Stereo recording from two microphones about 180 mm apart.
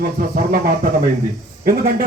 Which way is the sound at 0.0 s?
55° right (ahead or behind).